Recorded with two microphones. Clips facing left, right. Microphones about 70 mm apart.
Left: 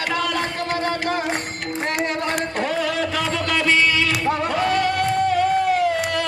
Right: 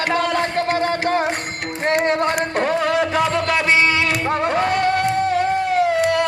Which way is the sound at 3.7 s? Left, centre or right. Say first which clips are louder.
Even; right.